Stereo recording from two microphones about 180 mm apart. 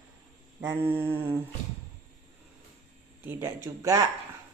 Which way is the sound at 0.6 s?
10° right (ahead or behind).